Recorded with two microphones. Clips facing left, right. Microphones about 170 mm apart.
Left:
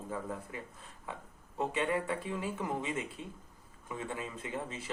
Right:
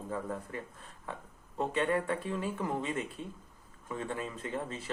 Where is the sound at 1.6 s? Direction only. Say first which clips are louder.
Right 2 dB; 15° left (ahead or behind).